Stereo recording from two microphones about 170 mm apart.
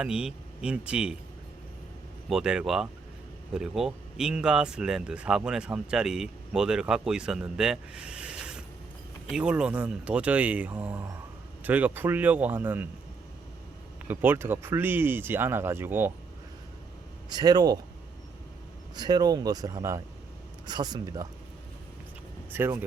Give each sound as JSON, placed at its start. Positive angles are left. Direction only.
{"t": 0.0, "sound": "speech", "side_deg": -5}
{"t": 2.3, "sound": "speech", "side_deg": -5}
{"t": 14.1, "sound": "speech", "side_deg": -10}
{"t": 17.2, "sound": "speech", "side_deg": -25}
{"t": 18.9, "sound": "speech", "side_deg": -25}
{"t": 22.5, "sound": "speech", "side_deg": -15}